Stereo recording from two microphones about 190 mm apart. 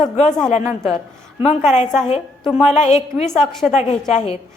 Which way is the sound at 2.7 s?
35° left (ahead or behind).